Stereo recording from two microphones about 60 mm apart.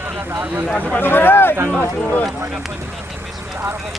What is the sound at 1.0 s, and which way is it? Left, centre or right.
Speech, left.